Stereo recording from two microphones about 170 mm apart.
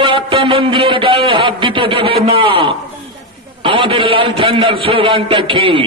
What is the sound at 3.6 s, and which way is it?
A man's voice, 30° right (ahead or behind).